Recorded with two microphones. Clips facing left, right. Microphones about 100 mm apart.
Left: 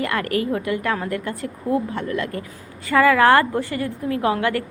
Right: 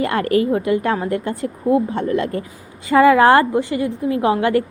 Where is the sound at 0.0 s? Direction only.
25° right (ahead or behind).